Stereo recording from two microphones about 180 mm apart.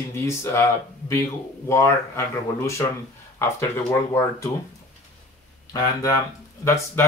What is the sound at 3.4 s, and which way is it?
Speech, 15° left (ahead or behind).